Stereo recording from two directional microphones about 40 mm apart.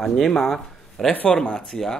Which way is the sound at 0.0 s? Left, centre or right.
Centre.